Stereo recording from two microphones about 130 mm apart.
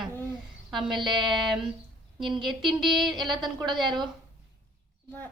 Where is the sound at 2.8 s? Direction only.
Centre (ahead or behind).